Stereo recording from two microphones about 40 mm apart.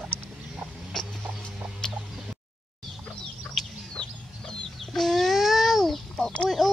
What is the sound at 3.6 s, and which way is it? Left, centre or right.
Chicken, centre.